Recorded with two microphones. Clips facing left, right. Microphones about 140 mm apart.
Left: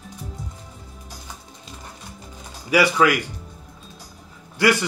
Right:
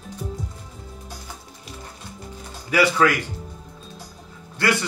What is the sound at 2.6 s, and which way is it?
Speech, 15° left (ahead or behind).